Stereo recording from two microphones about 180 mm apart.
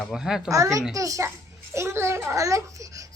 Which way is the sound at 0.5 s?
20° right (ahead or behind).